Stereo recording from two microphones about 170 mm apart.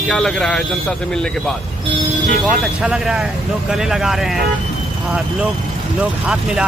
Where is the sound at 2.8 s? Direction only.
5° right (ahead or behind).